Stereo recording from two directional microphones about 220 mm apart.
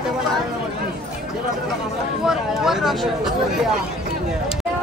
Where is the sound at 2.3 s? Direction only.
Centre (ahead or behind).